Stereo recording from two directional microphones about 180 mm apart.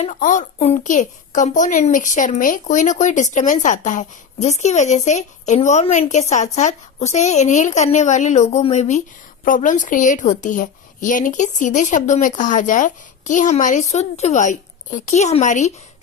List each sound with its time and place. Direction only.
0.0 s a woman's voice: 45° left (ahead or behind)